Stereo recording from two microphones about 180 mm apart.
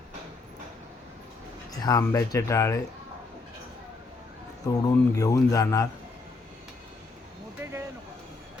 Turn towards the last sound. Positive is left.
turn(degrees=-15)  # may be behind; listen again after turning